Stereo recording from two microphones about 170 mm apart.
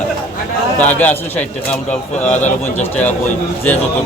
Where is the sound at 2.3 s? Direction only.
45° left (ahead or behind).